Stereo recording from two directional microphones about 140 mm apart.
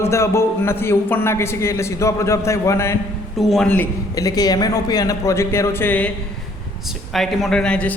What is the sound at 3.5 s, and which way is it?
Speech, 10° left (ahead or behind).